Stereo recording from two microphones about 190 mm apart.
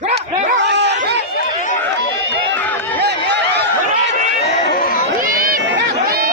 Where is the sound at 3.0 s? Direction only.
60° right (ahead or behind).